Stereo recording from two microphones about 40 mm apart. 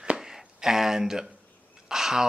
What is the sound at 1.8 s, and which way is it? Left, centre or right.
Speech, centre.